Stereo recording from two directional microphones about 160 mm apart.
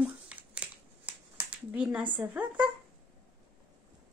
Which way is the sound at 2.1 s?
10° right (ahead or behind).